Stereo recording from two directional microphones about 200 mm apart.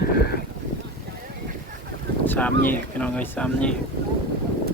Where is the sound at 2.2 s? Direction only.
10° left (ahead or behind).